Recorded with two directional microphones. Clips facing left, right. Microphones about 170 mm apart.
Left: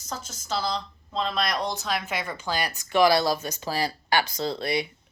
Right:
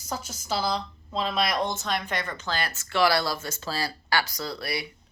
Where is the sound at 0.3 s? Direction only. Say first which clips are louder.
Right 1 dB; 10° right (ahead or behind).